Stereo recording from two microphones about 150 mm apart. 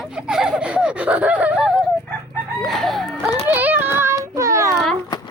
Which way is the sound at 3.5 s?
10° right (ahead or behind).